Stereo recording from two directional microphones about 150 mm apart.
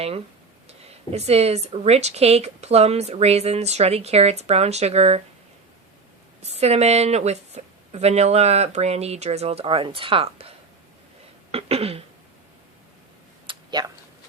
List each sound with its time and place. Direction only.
0.7 s speech: 45° right (ahead or behind)
6.4 s speech: 45° right (ahead or behind)
11.5 s throat clearing: 40° right (ahead or behind)
13.5 s a sound: 30° right (ahead or behind)